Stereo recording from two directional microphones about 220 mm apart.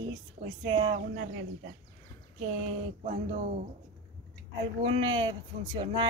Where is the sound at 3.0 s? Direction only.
35° right (ahead or behind).